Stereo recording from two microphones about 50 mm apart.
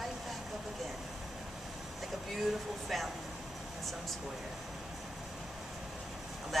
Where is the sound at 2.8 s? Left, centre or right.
Centre.